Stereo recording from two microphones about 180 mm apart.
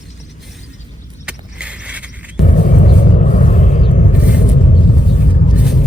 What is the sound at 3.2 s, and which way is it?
Vehicle, 40° left (ahead or behind).